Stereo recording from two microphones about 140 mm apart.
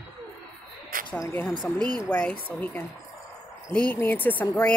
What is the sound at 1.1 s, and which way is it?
Speech, 15° left (ahead or behind).